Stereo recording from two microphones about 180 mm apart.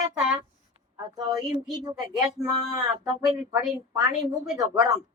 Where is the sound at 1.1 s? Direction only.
20° right (ahead or behind).